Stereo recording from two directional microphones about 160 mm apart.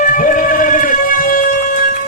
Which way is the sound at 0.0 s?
55° left (ahead or behind).